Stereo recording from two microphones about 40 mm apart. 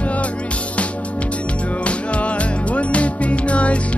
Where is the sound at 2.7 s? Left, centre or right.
Left.